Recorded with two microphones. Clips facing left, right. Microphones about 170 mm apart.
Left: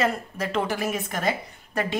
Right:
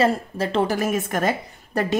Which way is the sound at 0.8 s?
50° right (ahead or behind).